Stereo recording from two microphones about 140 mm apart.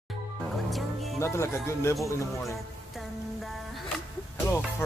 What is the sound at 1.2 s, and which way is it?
Music, 20° left (ahead or behind).